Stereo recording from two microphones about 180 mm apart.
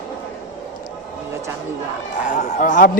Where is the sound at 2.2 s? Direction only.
40° left (ahead or behind).